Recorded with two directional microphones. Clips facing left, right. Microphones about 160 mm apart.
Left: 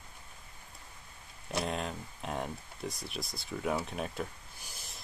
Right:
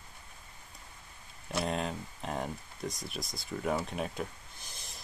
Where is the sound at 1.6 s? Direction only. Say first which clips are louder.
Right 2 dB; centre (ahead or behind).